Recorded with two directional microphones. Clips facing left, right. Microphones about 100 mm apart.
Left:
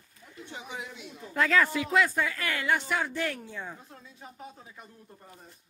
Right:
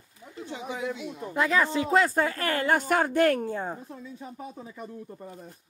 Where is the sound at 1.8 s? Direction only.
35° right (ahead or behind).